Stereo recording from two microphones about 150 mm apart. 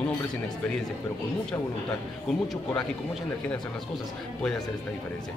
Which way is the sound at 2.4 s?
Centre (ahead or behind).